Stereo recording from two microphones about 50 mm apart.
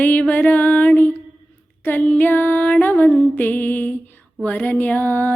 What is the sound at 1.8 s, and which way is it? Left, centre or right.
Female singing, left.